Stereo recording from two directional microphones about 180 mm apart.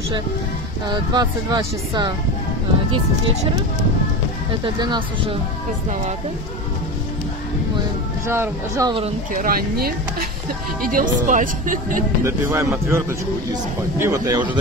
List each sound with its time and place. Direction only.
1.1 s speech: 20° right (ahead or behind)
4.7 s speech: 25° right (ahead or behind)
8.3 s speech: 15° right (ahead or behind)
9.3 s speech: 50° right (ahead or behind)
12.2 s speech: 15° right (ahead or behind)